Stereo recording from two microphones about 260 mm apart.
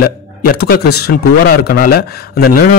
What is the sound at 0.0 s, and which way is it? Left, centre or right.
A man's voice, left.